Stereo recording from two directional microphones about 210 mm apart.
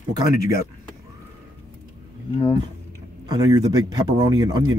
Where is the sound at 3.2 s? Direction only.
20° right (ahead or behind).